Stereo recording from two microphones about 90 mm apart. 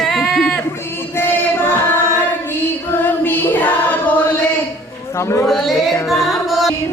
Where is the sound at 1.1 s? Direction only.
25° left (ahead or behind).